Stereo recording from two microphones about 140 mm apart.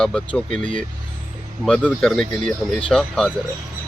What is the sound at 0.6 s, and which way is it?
Speech, 65° right (ahead or behind).